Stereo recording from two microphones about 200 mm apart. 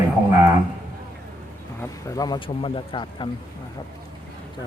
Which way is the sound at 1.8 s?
15° left (ahead or behind).